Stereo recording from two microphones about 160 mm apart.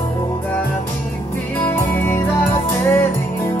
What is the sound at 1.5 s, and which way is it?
Music, 15° left (ahead or behind).